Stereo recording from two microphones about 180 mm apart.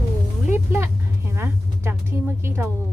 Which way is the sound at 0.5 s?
15° right (ahead or behind).